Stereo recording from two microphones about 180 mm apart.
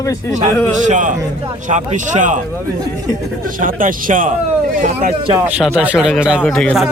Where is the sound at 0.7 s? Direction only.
45° right (ahead or behind).